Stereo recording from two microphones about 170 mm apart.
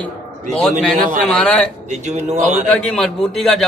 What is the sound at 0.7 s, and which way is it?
Speech, 50° right (ahead or behind).